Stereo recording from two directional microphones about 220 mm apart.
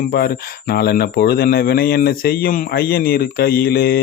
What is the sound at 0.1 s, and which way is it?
Speech, 45° left (ahead or behind).